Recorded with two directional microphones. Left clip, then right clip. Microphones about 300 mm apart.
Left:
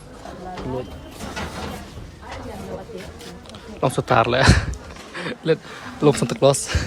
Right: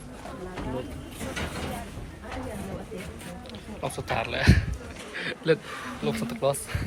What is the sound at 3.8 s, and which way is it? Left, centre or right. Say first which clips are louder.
Speech: left 12 dB; left.